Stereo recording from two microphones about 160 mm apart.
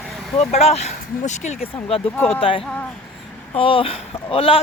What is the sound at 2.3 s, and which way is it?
Speech, 35° left (ahead or behind).